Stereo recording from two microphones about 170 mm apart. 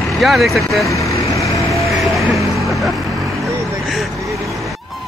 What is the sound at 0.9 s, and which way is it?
Vehicle, 20° left (ahead or behind).